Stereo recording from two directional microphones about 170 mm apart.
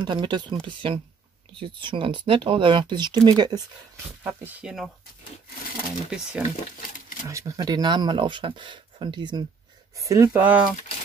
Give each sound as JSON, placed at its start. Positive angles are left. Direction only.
{"t": 0.0, "sound": "speech", "side_deg": -25}
{"t": 6.0, "sound": "speech", "side_deg": -5}
{"t": 7.2, "sound": "speech", "side_deg": -20}